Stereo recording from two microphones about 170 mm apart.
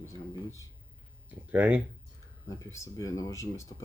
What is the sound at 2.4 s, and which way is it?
Speech, 15° left (ahead or behind).